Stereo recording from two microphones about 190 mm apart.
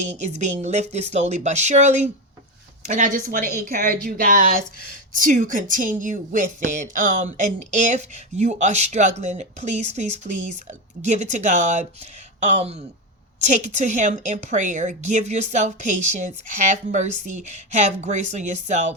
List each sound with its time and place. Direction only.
0.0 s speech: 40° right (ahead or behind)